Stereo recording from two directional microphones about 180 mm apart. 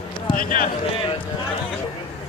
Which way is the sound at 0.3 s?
50° left (ahead or behind).